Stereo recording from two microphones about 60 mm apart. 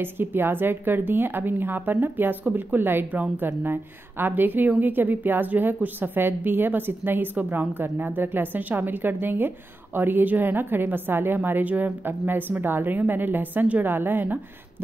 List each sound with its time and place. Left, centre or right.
0.0 s a woman's voice: right